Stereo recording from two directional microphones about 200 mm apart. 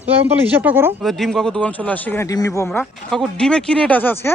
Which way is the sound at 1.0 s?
Centre (ahead or behind).